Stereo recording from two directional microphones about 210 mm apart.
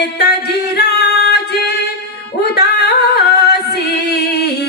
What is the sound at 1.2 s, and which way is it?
Singing, 50° left (ahead or behind).